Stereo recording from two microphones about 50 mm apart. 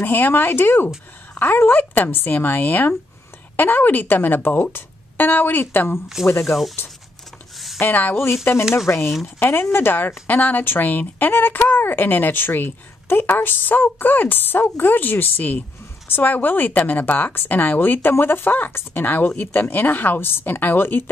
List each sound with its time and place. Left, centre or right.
0.0 s speech: left
6.2 s speech: centre
7.5 s a sound: centre
7.8 s speech: left
8.7 s speech: left
9.4 s speech: left